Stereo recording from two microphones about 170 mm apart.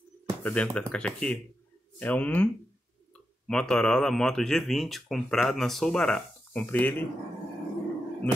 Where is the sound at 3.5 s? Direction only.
5° left (ahead or behind).